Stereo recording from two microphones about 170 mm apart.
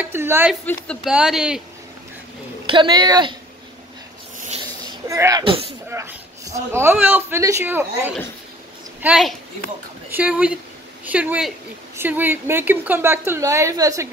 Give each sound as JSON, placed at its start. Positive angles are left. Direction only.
{"t": 0.0, "sound": "a sound", "side_deg": -15}
{"t": 0.8, "sound": "speech", "side_deg": -5}
{"t": 2.6, "sound": "a woman's voice", "side_deg": -30}
{"t": 5.0, "sound": "a woman's voice", "side_deg": -20}
{"t": 5.4, "sound": "speech", "side_deg": -30}
{"t": 5.9, "sound": "a woman's voice", "side_deg": -15}